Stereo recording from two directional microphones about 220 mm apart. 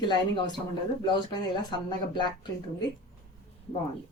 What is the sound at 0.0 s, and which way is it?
Speech, 20° left (ahead or behind).